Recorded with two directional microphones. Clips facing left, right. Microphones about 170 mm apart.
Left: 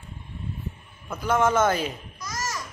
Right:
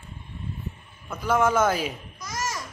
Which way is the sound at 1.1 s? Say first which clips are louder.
Even; centre (ahead or behind).